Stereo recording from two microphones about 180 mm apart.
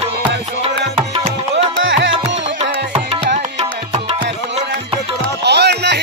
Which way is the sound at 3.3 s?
30° right (ahead or behind).